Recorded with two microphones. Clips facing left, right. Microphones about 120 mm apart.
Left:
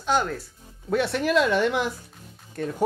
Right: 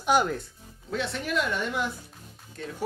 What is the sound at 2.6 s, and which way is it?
Speech, 55° left (ahead or behind).